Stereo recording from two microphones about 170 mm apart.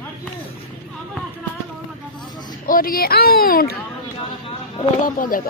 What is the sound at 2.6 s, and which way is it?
Speech, 60° left (ahead or behind).